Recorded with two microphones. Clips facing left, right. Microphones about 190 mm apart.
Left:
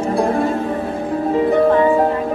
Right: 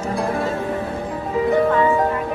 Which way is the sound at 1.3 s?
35° left (ahead or behind).